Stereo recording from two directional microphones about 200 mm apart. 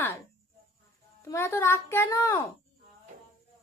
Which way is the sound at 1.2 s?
15° left (ahead or behind).